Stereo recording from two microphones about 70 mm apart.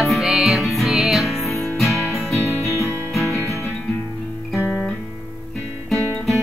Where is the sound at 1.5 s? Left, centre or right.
Left.